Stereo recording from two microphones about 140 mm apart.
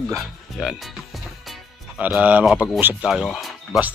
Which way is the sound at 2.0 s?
10° right (ahead or behind).